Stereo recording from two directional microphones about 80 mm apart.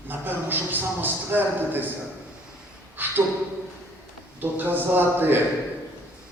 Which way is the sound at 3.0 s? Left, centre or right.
Right.